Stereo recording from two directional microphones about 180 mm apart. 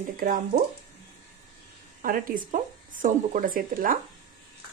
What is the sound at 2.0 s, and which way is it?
Speech, 45° right (ahead or behind).